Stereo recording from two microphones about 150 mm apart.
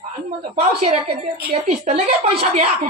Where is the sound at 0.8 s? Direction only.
45° right (ahead or behind).